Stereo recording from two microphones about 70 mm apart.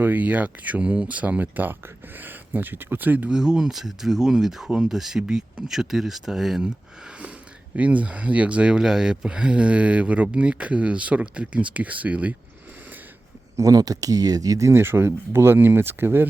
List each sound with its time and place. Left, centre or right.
0.0 s speech: right
3.2 s speech: centre
7.8 s speech: centre
13.6 s speech: right
14.7 s speech: right